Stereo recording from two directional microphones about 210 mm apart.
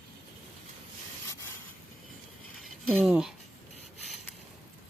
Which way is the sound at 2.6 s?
Centre (ahead or behind).